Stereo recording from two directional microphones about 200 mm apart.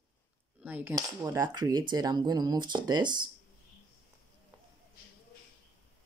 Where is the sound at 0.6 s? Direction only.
10° right (ahead or behind).